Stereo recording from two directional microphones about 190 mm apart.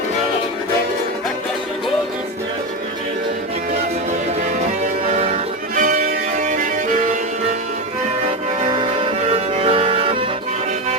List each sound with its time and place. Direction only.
5.0 s music: 35° right (ahead or behind)
8.7 s music: 25° right (ahead or behind)